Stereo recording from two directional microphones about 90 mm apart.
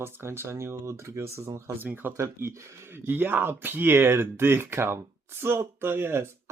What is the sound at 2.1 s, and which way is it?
Speech, 35° right (ahead or behind).